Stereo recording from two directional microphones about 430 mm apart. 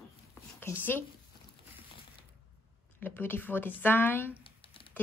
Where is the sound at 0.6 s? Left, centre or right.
Centre.